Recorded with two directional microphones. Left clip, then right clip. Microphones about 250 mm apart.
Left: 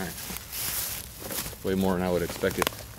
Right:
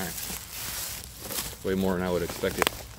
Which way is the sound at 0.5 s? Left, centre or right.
Left.